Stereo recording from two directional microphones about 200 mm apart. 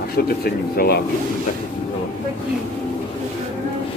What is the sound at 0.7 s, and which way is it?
Speech, 50° left (ahead or behind).